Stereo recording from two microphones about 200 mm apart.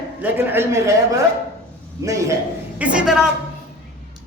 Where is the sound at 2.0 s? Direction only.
15° right (ahead or behind).